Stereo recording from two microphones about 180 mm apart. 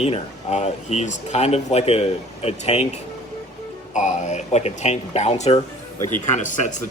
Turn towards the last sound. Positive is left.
turn(degrees=45)  # may be behind; listen again after turning